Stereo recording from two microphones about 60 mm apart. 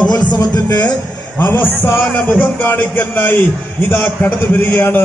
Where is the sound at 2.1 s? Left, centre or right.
Left.